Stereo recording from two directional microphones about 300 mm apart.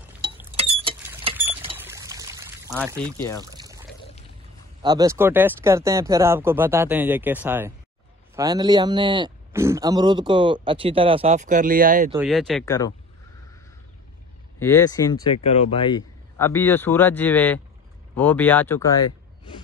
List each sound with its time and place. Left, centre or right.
0.0 s mechanisms: centre
0.6 s mechanisms: centre
1.3 s vehicle: centre
1.8 s pour: centre
3.2 s speech: centre
3.4 s pour: centre
4.8 s a man's voice: centre
12.2 s speech: centre
12.6 s speech: centre
14.6 s speech: centre